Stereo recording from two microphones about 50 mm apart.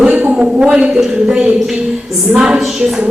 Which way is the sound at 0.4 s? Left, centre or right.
Centre.